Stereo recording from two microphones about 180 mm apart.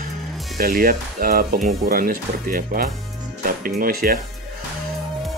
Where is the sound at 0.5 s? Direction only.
55° right (ahead or behind).